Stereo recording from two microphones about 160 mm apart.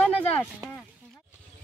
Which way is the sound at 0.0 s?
15° left (ahead or behind).